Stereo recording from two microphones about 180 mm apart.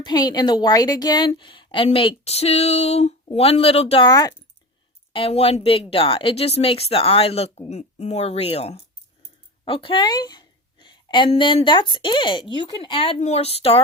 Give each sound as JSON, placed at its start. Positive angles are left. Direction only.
{"t": 0.0, "sound": "a woman's voice", "side_deg": 20}
{"t": 5.1, "sound": "a woman's voice", "side_deg": 30}